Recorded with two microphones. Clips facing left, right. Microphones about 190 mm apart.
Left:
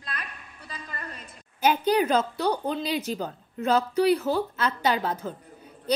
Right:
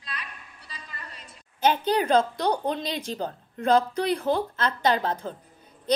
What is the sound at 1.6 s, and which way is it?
A woman's voice, 10° left (ahead or behind).